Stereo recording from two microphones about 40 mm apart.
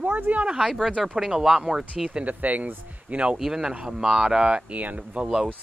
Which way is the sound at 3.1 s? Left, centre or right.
Right.